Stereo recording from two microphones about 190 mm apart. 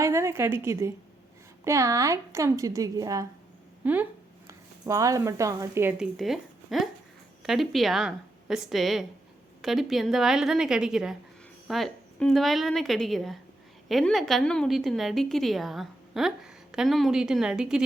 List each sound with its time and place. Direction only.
0.0 s a woman's voice: 15° right (ahead or behind)
3.8 s a woman's voice: 10° right (ahead or behind)
6.0 s a woman's voice: centre (ahead or behind)